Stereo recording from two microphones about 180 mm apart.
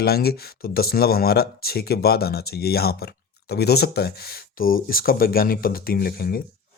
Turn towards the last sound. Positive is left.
turn(degrees=55)  # may be behind; listen again after turning